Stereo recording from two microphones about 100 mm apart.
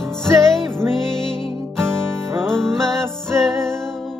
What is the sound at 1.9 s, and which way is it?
Music, 25° right (ahead or behind).